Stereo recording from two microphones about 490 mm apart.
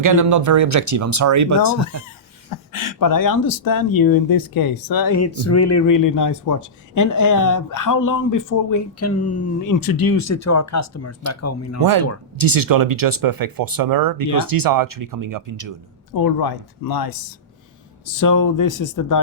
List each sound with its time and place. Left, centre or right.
0.0 s speech: right
1.8 s speech: left
11.8 s speech: right
16.1 s speech: left